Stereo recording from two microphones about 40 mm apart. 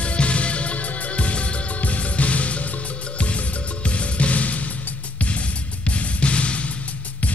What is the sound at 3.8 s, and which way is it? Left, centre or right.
Music, left.